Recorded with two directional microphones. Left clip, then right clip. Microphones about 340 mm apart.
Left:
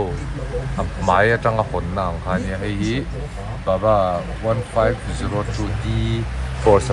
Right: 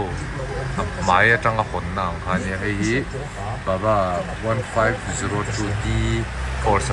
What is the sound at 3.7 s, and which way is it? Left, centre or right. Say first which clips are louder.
Speech: left 3 dB; centre.